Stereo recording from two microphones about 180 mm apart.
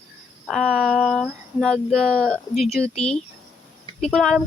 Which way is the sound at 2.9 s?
35° left (ahead or behind).